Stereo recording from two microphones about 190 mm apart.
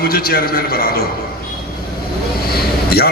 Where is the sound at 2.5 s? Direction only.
55° left (ahead or behind).